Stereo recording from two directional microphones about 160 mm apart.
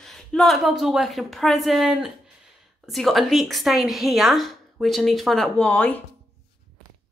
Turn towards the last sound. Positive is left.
turn(degrees=10)  # may be behind; listen again after turning